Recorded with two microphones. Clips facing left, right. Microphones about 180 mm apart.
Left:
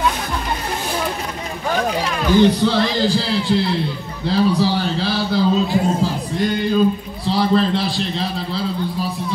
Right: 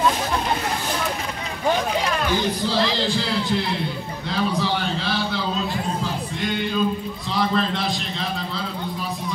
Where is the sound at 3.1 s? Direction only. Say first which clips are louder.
Left 5 dB; 30° left (ahead or behind).